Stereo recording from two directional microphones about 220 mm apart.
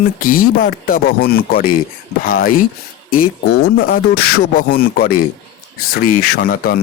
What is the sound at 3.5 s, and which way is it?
Speech, 45° left (ahead or behind).